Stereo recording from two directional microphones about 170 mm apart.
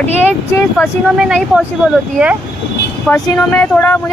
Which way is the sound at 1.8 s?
Centre (ahead or behind).